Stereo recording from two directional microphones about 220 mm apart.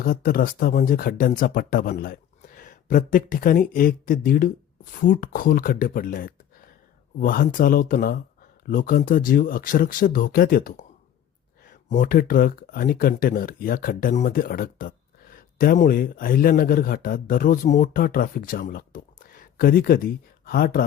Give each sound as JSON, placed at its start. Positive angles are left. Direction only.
{"t": 0.0, "sound": "speech", "side_deg": 40}